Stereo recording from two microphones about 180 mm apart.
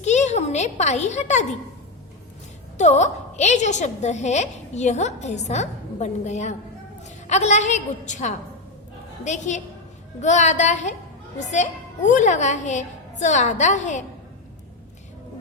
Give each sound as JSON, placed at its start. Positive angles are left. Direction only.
{"t": 0.0, "sound": "a child's voice", "side_deg": 40}
{"t": 2.7, "sound": "a woman's voice", "side_deg": 40}